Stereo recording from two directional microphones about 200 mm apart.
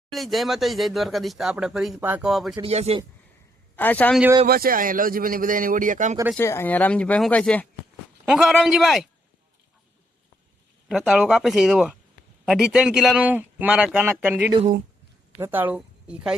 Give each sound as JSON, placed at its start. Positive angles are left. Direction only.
{"t": 0.1, "sound": "speech", "side_deg": 0}
{"t": 2.6, "sound": "speech", "side_deg": -30}
{"t": 3.8, "sound": "speech", "side_deg": 10}
{"t": 4.4, "sound": "a man's voice", "side_deg": -50}
{"t": 6.3, "sound": "speech", "side_deg": 10}
{"t": 10.8, "sound": "a woman's voice", "side_deg": 0}